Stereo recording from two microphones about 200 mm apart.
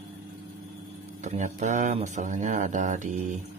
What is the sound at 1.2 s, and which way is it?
Speech, 35° right (ahead or behind).